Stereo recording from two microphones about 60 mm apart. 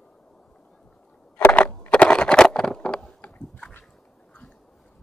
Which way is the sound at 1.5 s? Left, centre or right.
Left.